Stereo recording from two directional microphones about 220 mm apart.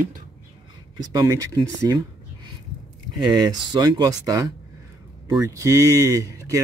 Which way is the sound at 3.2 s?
20° right (ahead or behind).